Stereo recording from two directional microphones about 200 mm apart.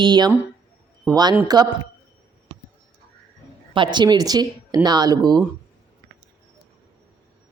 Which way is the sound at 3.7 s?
25° right (ahead or behind).